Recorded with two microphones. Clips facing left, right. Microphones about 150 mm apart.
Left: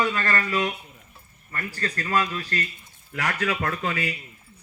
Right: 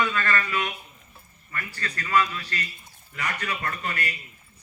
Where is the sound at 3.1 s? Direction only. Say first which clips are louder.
Left 5 dB; 90° left.